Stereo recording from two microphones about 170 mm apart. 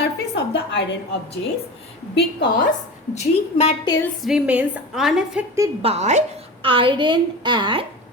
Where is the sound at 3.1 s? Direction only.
35° left (ahead or behind).